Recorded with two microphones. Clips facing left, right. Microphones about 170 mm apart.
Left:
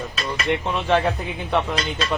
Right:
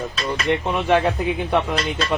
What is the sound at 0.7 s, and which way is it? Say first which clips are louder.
Speech: right 2 dB; 15° right (ahead or behind).